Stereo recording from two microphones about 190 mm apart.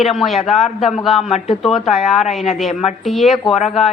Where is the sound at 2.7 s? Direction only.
35° left (ahead or behind).